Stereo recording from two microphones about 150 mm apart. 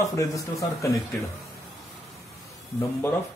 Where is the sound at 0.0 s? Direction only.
20° left (ahead or behind).